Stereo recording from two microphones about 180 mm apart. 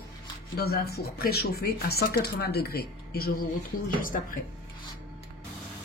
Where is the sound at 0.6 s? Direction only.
60° left (ahead or behind).